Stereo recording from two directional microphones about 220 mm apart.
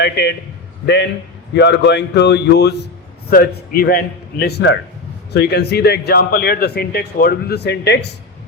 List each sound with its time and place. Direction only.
0.0 s a man's voice: 50° left (ahead or behind)
1.5 s a man's voice: 50° left (ahead or behind)